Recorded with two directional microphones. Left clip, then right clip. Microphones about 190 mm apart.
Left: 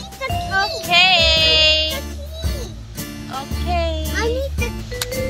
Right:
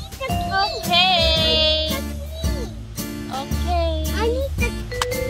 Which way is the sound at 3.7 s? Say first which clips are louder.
Left 1 dB; 10° left (ahead or behind).